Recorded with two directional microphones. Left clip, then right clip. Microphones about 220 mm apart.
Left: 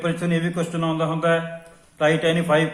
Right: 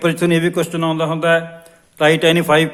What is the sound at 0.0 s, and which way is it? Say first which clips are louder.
A man's voice: right 9 dB; 45° right (ahead or behind).